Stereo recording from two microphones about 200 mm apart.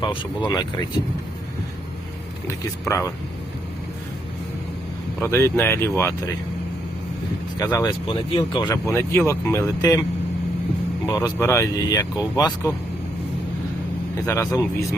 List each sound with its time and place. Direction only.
0.0 s speech: 25° left (ahead or behind)
5.2 s speech: 10° left (ahead or behind)
7.6 s speech: 15° left (ahead or behind)
11.0 s speech: 15° left (ahead or behind)
14.3 s speech: 15° left (ahead or behind)